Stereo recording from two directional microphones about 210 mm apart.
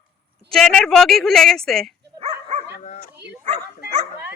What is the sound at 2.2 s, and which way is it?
Dog, 30° right (ahead or behind).